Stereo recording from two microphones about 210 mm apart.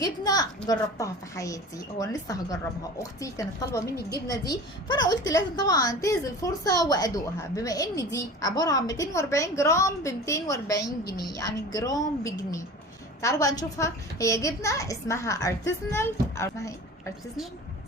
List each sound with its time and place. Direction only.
0.0 s a child's voice: 20° left (ahead or behind)